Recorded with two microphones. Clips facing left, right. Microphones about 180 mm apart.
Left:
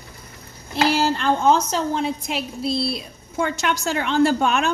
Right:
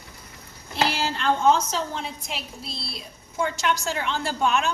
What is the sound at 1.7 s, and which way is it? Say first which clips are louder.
A woman's voice: left 7 dB; 55° left (ahead or behind).